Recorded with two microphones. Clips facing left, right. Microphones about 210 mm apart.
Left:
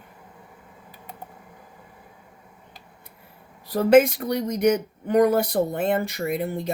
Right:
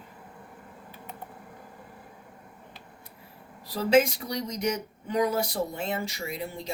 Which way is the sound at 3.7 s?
55° left (ahead or behind).